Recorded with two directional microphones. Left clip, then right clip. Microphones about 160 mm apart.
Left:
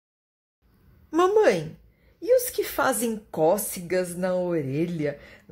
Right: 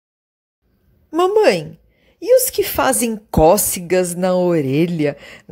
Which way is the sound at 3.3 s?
50° right (ahead or behind).